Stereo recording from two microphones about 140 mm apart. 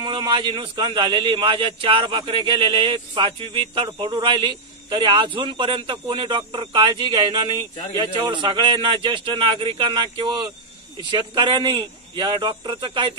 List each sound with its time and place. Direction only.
0.0 s a man's voice: 35° right (ahead or behind)